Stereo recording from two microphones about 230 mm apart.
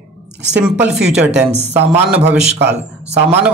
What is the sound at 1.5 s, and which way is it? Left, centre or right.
Speech, right.